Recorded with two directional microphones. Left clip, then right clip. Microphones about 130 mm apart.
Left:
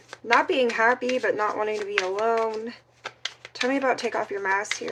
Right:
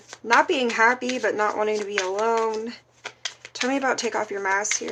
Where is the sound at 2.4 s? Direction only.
35° right (ahead or behind).